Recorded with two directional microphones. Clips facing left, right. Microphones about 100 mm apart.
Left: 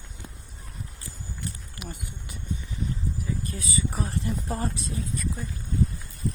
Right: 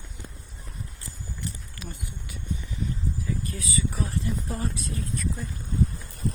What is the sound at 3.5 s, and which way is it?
Speech, 30° left (ahead or behind).